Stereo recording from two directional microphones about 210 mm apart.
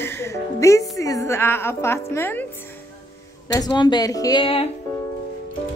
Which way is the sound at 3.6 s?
20° left (ahead or behind).